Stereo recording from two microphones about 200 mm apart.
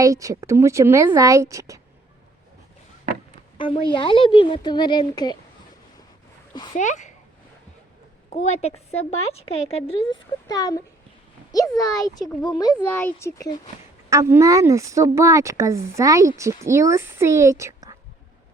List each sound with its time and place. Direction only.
0.0 s speech: 15° right (ahead or behind)
3.9 s speech: 25° left (ahead or behind)
6.7 s speech: 35° left (ahead or behind)
8.3 s a child's voice: 30° left (ahead or behind); by 13.6 s 15° left (ahead or behind)
14.1 s speech: 15° right (ahead or behind)